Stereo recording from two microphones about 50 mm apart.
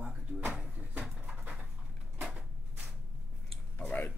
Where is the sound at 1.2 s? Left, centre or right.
Centre.